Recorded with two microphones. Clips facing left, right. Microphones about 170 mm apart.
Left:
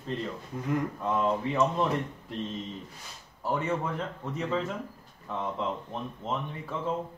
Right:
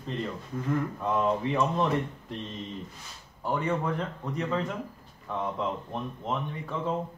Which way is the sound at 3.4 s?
5° left (ahead or behind).